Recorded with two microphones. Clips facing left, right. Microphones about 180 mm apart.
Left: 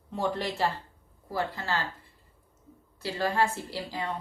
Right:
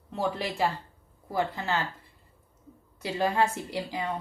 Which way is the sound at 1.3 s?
20° right (ahead or behind).